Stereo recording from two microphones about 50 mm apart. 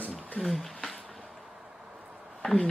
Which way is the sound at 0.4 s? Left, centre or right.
Centre.